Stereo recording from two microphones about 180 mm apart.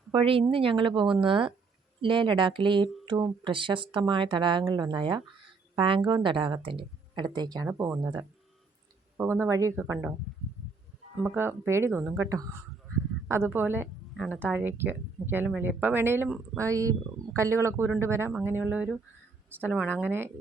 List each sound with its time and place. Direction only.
0.1 s a woman's voice: 30° right (ahead or behind); by 10.2 s 10° right (ahead or behind)
11.2 s a woman's voice: 10° right (ahead or behind)